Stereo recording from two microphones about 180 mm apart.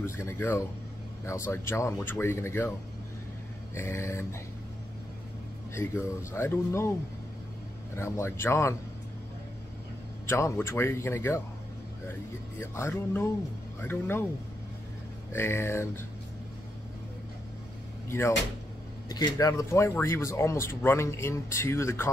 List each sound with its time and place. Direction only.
0.0 s speech: 15° left (ahead or behind)
3.7 s speech: 15° left (ahead or behind)
6.3 s speech: 15° left (ahead or behind)
7.9 s speech: 15° left (ahead or behind)
10.2 s speech: 15° left (ahead or behind)
12.5 s speech: 15° left (ahead or behind)
15.3 s speech: 15° left (ahead or behind)
19.0 s speech: 20° left (ahead or behind)